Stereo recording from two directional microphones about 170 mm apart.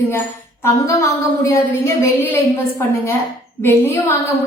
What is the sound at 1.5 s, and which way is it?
A woman's voice, 15° left (ahead or behind).